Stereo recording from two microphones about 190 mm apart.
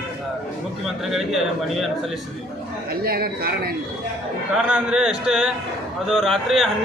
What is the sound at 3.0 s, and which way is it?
Speech, 55° right (ahead or behind).